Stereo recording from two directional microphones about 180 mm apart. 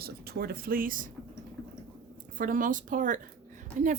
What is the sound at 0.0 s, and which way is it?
Speech, 60° right (ahead or behind).